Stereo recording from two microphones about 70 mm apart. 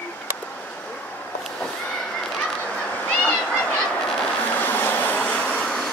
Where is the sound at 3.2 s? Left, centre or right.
Centre.